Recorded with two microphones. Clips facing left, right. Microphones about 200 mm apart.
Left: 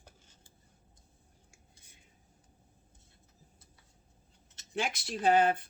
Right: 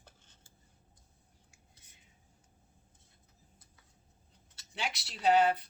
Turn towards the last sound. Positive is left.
turn(degrees=50)  # may be behind; listen again after turning